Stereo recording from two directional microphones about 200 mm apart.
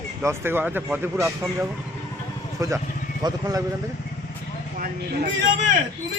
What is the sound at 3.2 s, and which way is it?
Speech, 20° right (ahead or behind).